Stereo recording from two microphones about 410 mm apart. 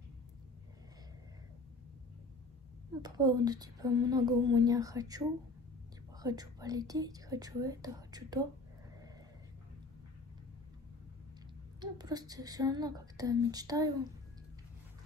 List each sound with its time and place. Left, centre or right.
3.0 s a woman's voice: centre
11.8 s a woman's voice: centre